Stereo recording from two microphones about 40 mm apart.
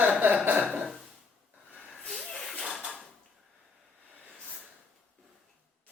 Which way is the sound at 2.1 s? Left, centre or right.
Centre.